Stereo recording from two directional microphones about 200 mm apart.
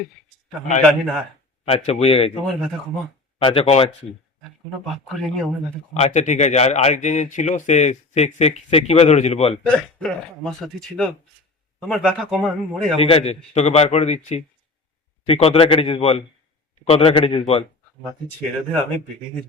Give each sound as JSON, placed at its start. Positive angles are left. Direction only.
{"t": 0.8, "sound": "a man's voice", "side_deg": 5}
{"t": 1.6, "sound": "a man's voice", "side_deg": 30}
{"t": 3.3, "sound": "a man's voice", "side_deg": 30}
{"t": 4.9, "sound": "a man's voice", "side_deg": 0}
{"t": 5.9, "sound": "speech", "side_deg": 35}
{"t": 9.6, "sound": "a man's voice", "side_deg": 5}
{"t": 13.0, "sound": "a man's voice", "side_deg": 30}